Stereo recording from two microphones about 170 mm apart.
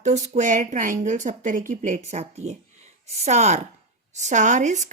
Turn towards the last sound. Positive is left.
turn(degrees=-45)  # may be behind; listen again after turning